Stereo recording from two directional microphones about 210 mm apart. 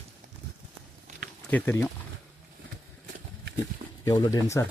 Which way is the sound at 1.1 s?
35° right (ahead or behind).